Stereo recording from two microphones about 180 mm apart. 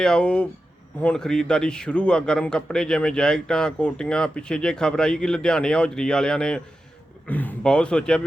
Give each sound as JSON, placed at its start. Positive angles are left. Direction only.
{"t": 0.0, "sound": "a man's voice", "side_deg": 5}